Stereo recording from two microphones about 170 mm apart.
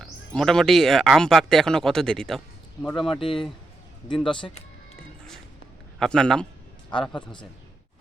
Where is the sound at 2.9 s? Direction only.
30° left (ahead or behind).